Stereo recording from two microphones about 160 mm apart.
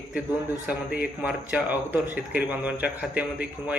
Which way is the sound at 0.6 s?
10° right (ahead or behind).